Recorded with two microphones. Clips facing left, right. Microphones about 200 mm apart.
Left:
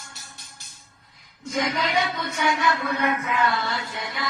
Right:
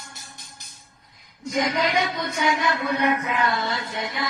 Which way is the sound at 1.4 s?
15° right (ahead or behind).